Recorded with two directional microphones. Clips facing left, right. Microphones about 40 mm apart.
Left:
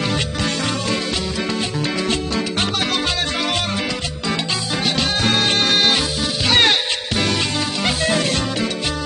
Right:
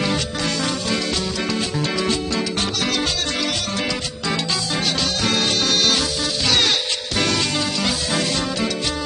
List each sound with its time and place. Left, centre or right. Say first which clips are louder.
4.8 s music: left 5 dB; left
6.4 s music: left 4 dB; left